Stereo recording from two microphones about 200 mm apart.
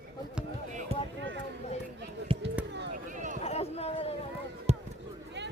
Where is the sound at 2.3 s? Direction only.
25° right (ahead or behind).